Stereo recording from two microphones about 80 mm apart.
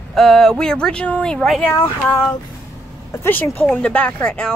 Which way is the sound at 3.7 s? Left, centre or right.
Centre.